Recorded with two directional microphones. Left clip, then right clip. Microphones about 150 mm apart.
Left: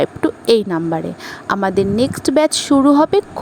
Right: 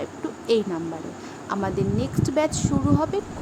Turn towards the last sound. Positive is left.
turn(degrees=65)  # may be behind; listen again after turning